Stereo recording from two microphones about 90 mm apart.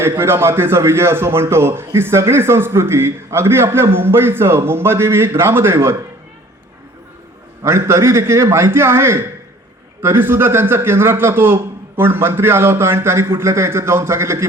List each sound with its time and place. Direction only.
0.0 s a man's voice: 30° right (ahead or behind)
7.6 s a man's voice: 30° right (ahead or behind)